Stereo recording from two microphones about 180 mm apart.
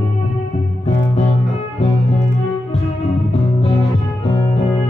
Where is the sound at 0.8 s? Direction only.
40° left (ahead or behind).